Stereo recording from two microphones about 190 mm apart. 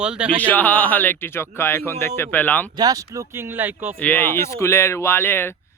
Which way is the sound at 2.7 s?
20° right (ahead or behind).